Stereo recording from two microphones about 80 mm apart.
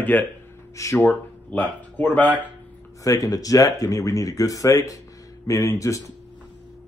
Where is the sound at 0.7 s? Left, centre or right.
Left.